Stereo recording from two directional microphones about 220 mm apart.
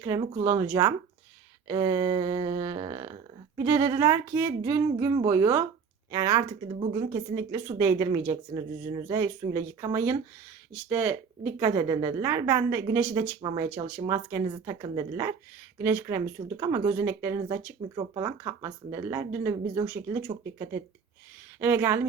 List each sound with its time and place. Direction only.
0.0 s speech: 15° right (ahead or behind)
13.4 s speech: 20° right (ahead or behind)
13.7 s speech: 10° right (ahead or behind)
21.6 s speech: 10° right (ahead or behind)